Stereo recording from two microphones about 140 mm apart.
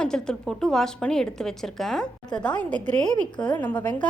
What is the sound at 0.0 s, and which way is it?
A woman's voice, 5° left (ahead or behind).